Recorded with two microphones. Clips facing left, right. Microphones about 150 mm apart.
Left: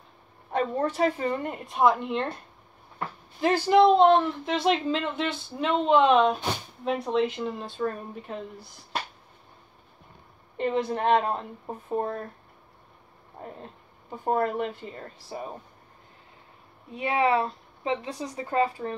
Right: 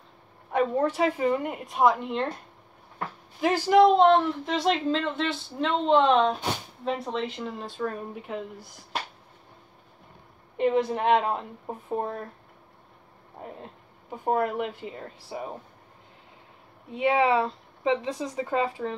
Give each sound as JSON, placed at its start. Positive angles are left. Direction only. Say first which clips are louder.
{"t": 0.5, "sound": "a woman's voice", "louder": "right 2 dB", "side_deg": -10}
{"t": 3.3, "sound": "speech", "louder": "even", "side_deg": -10}
{"t": 8.1, "sound": "a woman's voice", "louder": "right 2 dB", "side_deg": -15}
{"t": 10.6, "sound": "a woman's voice", "louder": "right 2 dB", "side_deg": -10}
{"t": 14.1, "sound": "a woman's voice", "louder": "even", "side_deg": -10}
{"t": 16.9, "sound": "a woman's voice", "louder": "right 2 dB", "side_deg": -25}